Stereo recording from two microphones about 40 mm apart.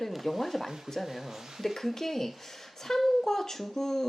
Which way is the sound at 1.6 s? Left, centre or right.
Centre.